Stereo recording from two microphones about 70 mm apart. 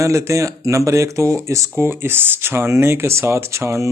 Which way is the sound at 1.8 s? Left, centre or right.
Right.